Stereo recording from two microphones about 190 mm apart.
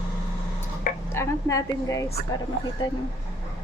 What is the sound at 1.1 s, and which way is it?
Speech, 15° left (ahead or behind).